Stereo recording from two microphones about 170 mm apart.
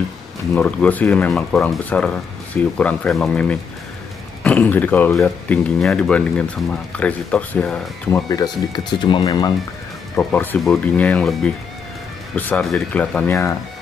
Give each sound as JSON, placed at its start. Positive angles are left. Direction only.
{"t": 0.6, "sound": "speech", "side_deg": 10}
{"t": 8.3, "sound": "speech", "side_deg": 25}
{"t": 10.1, "sound": "speech", "side_deg": 10}